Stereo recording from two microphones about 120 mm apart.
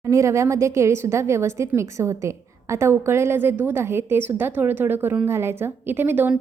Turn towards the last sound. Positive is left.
turn(degrees=-15)  # may be behind; listen again after turning